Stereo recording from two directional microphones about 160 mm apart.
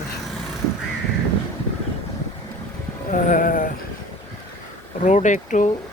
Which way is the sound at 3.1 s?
55° left (ahead or behind).